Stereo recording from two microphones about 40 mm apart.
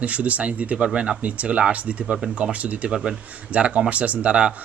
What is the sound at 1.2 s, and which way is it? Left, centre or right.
Speech, right.